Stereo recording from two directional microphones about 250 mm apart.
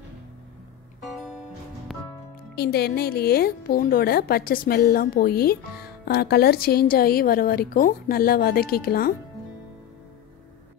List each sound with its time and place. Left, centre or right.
1.1 s music: centre
2.5 s speech: left